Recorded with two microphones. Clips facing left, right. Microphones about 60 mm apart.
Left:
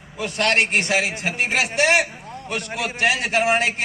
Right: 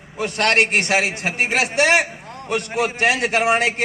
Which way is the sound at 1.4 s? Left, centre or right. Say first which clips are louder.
Right 2 dB; right.